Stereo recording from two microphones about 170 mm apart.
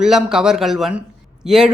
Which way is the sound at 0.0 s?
5° right (ahead or behind).